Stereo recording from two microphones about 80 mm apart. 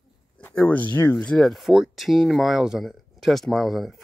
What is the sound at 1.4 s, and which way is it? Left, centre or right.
Speech, centre.